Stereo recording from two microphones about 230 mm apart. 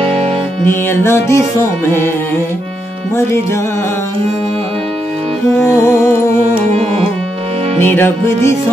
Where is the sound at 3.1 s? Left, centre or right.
Centre.